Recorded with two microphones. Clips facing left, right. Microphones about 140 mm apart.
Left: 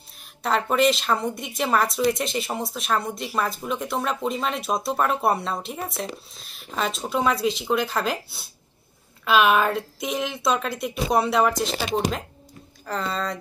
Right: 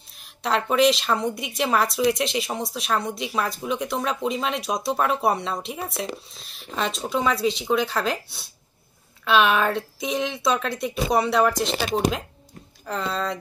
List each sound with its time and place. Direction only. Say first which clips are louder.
0.4 s a woman's voice: right 1 dB; centre (ahead or behind)